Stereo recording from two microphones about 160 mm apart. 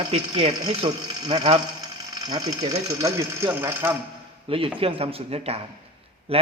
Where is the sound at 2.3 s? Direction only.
25° right (ahead or behind).